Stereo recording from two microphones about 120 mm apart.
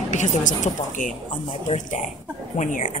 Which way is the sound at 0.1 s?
90° left.